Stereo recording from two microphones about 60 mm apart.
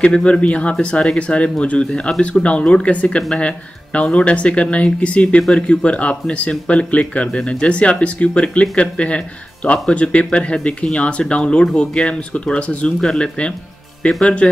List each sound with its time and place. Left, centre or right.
0.0 s speech: centre